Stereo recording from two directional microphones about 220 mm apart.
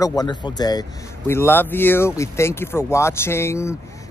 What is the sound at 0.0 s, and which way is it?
A man's voice, 15° left (ahead or behind).